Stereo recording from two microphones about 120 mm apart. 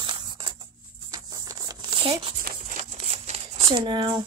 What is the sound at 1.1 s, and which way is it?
Maraca, 30° right (ahead or behind).